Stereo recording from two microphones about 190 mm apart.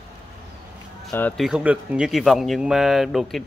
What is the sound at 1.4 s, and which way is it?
Speech, 5° right (ahead or behind).